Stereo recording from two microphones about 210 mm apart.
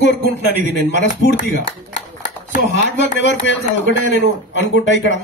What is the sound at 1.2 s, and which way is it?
Speech, 60° left (ahead or behind).